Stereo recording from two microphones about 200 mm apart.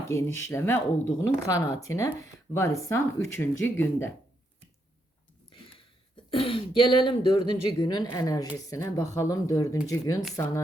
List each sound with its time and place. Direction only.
0.3 s speech: 15° left (ahead or behind)
6.3 s speech: 25° left (ahead or behind)